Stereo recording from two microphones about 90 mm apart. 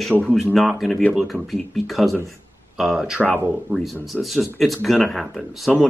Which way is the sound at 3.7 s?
20° right (ahead or behind).